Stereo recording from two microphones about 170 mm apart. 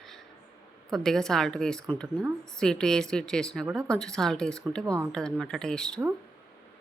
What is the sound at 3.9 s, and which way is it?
A woman's voice, 5° left (ahead or behind).